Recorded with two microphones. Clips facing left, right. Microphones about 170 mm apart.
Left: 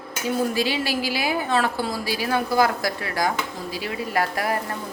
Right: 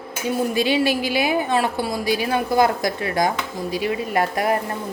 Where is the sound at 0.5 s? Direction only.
20° right (ahead or behind).